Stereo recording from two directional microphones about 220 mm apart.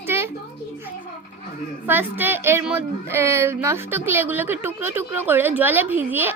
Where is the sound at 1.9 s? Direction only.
10° right (ahead or behind).